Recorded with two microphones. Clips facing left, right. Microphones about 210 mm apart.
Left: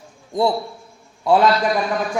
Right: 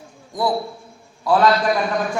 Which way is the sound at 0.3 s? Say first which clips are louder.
Left 2 dB; 25° left (ahead or behind).